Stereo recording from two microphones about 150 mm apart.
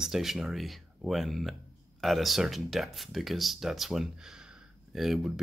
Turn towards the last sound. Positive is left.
turn(degrees=0)  # may be behind; listen again after turning